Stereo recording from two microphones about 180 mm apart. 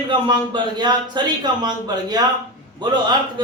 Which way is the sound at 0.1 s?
25° right (ahead or behind).